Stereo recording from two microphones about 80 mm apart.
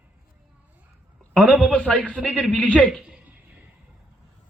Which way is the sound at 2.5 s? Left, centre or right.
Centre.